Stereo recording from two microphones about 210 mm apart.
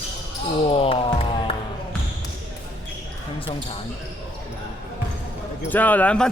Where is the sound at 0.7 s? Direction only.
25° left (ahead or behind).